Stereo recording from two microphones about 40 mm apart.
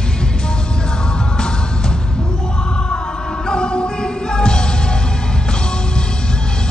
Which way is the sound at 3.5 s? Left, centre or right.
Left.